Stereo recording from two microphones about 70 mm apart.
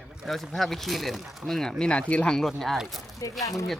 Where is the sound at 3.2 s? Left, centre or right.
Left.